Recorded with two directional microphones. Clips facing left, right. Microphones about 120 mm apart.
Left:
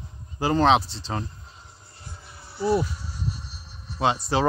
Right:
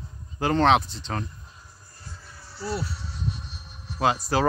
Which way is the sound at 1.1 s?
25° left (ahead or behind).